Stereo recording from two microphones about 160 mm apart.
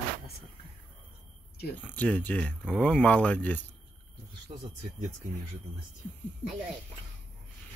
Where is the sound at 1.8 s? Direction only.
10° left (ahead or behind).